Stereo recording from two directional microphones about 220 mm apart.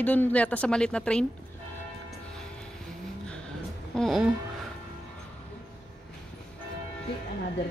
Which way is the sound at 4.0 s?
Centre (ahead or behind).